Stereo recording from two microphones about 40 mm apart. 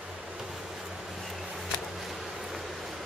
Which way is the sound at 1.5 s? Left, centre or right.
Centre.